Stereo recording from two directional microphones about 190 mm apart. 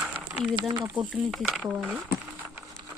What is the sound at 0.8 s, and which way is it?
Speech, 5° right (ahead or behind).